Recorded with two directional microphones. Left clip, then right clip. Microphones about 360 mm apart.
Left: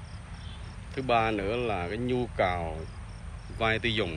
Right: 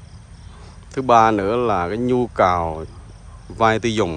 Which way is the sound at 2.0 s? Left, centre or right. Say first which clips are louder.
Right 11 dB; right.